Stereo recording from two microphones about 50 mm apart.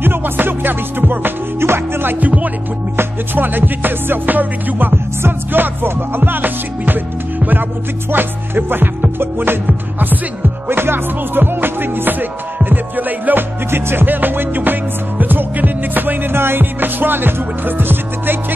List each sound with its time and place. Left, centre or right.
0.0 s music: right
2.1 s music: right
10.7 s music: right